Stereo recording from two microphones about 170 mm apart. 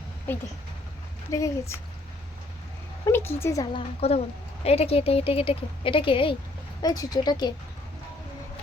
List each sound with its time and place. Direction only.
1.3 s a woman's voice: 15° left (ahead or behind)
3.1 s a woman's voice: 15° left (ahead or behind)
3.8 s a woman's voice: 35° left (ahead or behind)